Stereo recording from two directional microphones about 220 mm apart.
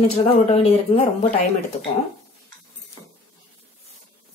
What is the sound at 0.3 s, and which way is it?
Speech, 30° left (ahead or behind).